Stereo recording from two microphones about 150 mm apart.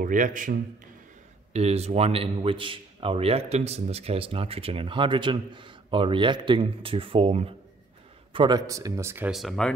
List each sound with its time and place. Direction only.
0.0 s a man's voice: 60° right (ahead or behind)
1.5 s a man's voice: 45° right (ahead or behind); by 9.3 s 15° right (ahead or behind)
9.3 s speech: centre (ahead or behind)